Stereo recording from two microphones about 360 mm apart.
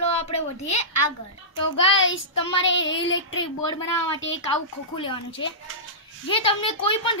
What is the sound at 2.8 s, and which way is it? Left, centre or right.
Speech, left.